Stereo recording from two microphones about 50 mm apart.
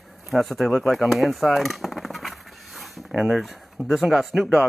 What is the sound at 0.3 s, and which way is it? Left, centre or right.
Speech, centre.